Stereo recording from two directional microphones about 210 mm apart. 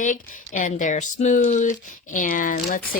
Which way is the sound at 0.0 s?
40° left (ahead or behind).